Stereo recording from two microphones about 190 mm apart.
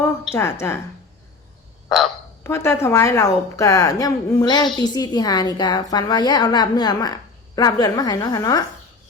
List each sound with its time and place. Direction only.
0.3 s a woman's voice: 15° left (ahead or behind)
2.4 s a woman's voice: 15° left (ahead or behind)